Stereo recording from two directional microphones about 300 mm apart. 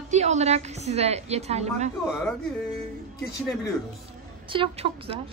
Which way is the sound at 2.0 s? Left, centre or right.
Centre.